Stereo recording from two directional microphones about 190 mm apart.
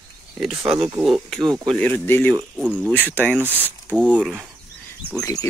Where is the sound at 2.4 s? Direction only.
5° right (ahead or behind).